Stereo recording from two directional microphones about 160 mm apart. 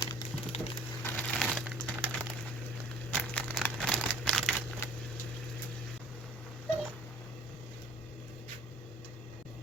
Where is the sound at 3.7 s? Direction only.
5° left (ahead or behind).